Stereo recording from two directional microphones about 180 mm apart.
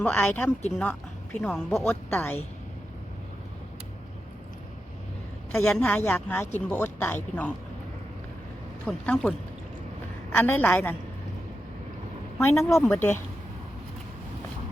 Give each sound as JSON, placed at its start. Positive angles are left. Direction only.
{"t": 0.0, "sound": "speech", "side_deg": 10}
{"t": 5.5, "sound": "a woman's voice", "side_deg": 5}
{"t": 8.9, "sound": "a woman's voice", "side_deg": 5}
{"t": 10.3, "sound": "speech", "side_deg": 10}
{"t": 12.4, "sound": "speech", "side_deg": 15}